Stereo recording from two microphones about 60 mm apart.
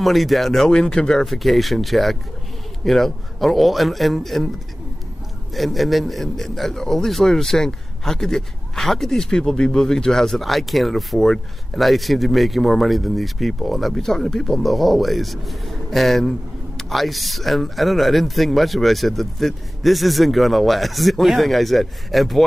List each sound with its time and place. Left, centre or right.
0.0 s a man's voice: centre
5.5 s a man's voice: centre